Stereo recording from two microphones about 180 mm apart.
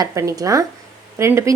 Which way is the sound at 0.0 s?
15° right (ahead or behind).